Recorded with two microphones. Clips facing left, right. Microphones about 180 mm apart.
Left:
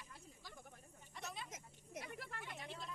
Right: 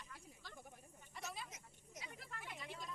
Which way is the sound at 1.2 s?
Centre (ahead or behind).